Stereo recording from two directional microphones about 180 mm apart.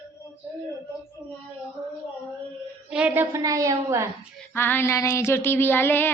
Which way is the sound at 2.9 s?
5° right (ahead or behind).